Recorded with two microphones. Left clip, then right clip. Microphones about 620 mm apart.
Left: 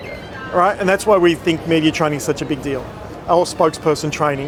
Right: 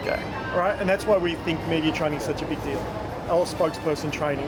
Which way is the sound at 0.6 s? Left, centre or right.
Left.